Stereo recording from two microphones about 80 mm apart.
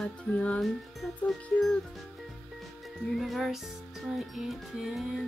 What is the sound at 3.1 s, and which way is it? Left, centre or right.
Speech, centre.